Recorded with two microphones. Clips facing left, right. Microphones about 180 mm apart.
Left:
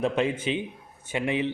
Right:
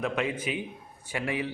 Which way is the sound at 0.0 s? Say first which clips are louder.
Left 4 dB; 30° left (ahead or behind).